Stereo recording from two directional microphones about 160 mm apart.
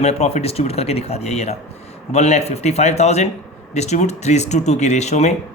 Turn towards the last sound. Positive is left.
turn(degrees=45)  # may be behind; listen again after turning